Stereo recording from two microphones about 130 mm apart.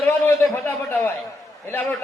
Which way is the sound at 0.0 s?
15° left (ahead or behind).